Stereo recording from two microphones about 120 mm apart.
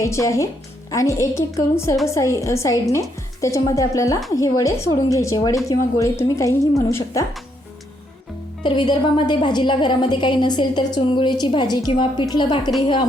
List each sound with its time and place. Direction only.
0.0 s a woman's voice: 25° left (ahead or behind)
8.6 s a woman's voice: 40° left (ahead or behind)